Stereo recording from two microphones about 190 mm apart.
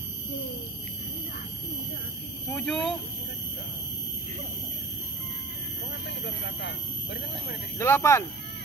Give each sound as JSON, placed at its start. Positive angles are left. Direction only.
{"t": 2.5, "sound": "speech", "side_deg": 5}
{"t": 6.0, "sound": "speech", "side_deg": 65}
{"t": 7.8, "sound": "speech", "side_deg": 15}